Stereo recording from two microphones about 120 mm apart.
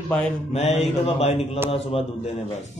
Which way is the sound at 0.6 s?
60° left (ahead or behind).